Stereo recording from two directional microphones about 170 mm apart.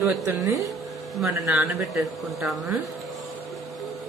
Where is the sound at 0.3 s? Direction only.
20° right (ahead or behind); by 2.0 s 5° right (ahead or behind).